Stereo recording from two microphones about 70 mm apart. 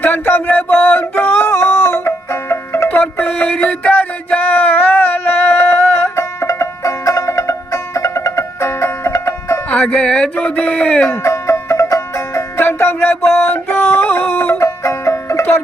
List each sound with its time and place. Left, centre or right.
0.0 s a sound: left
2.9 s music: left
9.6 s speech: centre
10.3 s a sound: centre
11.0 s music: left
12.5 s music: left
14.6 s music: left